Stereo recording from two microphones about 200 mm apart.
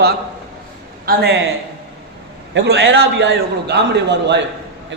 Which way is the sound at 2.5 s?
55° right (ahead or behind).